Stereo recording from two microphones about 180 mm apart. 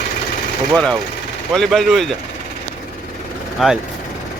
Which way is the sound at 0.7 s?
5° left (ahead or behind).